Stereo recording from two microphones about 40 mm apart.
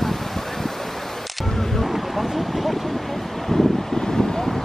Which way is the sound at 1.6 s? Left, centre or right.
Centre.